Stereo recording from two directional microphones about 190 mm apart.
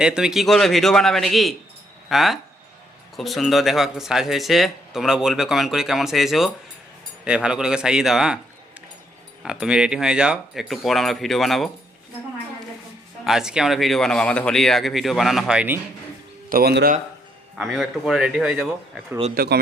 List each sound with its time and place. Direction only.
0.0 s speech: 5° right (ahead or behind)
9.4 s speech: 5° right (ahead or behind)
13.2 s speech: 5° right (ahead or behind)
16.5 s speech: 55° right (ahead or behind)
17.6 s speech: centre (ahead or behind)
19.3 s speech: 55° right (ahead or behind)